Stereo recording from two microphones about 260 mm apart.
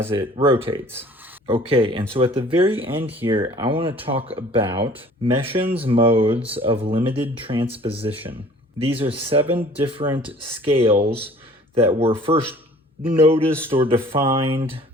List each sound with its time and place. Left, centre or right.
0.3 s speech: right
8.1 s speech: centre
8.8 s speech: right
10.9 s speech: right
11.7 s speech: right